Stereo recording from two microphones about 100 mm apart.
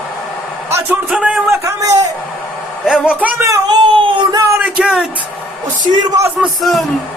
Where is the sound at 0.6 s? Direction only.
25° right (ahead or behind).